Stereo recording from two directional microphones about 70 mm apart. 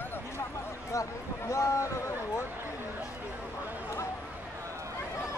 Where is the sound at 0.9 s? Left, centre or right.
Left.